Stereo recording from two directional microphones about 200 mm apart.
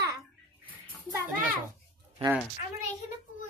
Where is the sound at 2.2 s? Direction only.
30° right (ahead or behind).